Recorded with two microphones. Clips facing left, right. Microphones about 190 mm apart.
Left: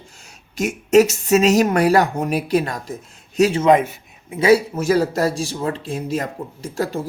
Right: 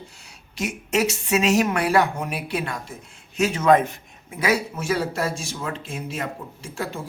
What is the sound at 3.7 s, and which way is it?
Speech, 10° left (ahead or behind).